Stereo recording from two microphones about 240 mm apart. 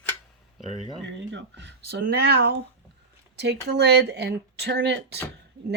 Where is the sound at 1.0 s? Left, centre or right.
Right.